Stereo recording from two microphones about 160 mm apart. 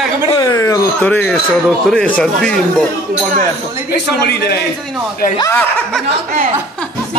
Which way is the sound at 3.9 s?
90° left.